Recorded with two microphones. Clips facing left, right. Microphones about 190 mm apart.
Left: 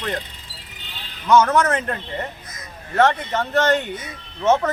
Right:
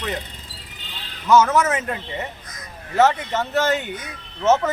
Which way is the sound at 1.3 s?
5° right (ahead or behind).